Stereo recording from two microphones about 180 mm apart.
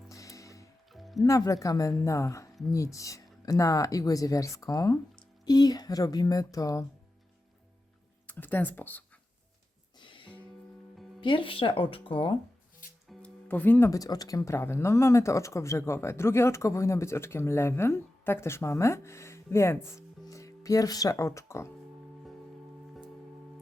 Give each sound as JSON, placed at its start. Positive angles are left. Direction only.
{"t": 0.1, "sound": "music", "side_deg": 15}
{"t": 0.9, "sound": "music", "side_deg": 0}
{"t": 1.2, "sound": "speech", "side_deg": 20}
{"t": 8.3, "sound": "speech", "side_deg": 10}
{"t": 10.0, "sound": "music", "side_deg": 25}
{"t": 11.2, "sound": "speech", "side_deg": 30}
{"t": 13.1, "sound": "speech", "side_deg": 10}